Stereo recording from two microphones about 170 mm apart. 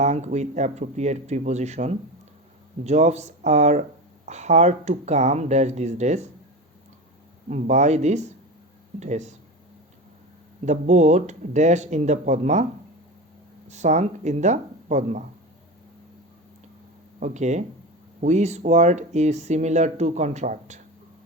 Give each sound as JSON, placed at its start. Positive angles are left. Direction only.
{"t": 0.0, "sound": "speech", "side_deg": -45}
{"t": 7.4, "sound": "speech", "side_deg": -45}
{"t": 10.7, "sound": "speech", "side_deg": -40}
{"t": 13.7, "sound": "speech", "side_deg": -40}
{"t": 17.2, "sound": "speech", "side_deg": -45}